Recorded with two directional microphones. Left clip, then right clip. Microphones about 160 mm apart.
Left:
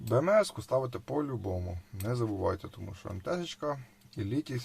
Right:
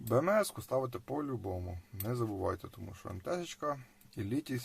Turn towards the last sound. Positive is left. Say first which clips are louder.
# left 3 dB
turn(degrees=-20)  # may be behind; listen again after turning